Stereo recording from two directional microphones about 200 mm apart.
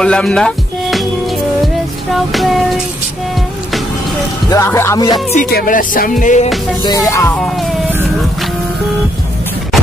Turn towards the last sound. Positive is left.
turn(degrees=0)  # may be behind; listen again after turning